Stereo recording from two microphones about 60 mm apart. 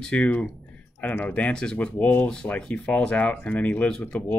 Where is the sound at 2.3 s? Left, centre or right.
Centre.